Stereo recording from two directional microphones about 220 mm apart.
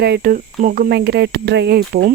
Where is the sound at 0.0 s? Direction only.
45° right (ahead or behind).